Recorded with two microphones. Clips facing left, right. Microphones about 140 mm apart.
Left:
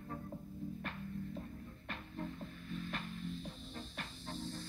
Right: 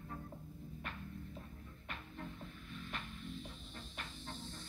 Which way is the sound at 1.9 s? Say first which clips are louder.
Left 4 dB; 40° left (ahead or behind).